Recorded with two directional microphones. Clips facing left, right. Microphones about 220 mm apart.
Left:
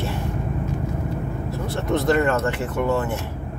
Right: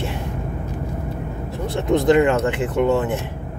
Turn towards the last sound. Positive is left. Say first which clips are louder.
# right 4 dB
turn(degrees=-20)  # may be behind; listen again after turning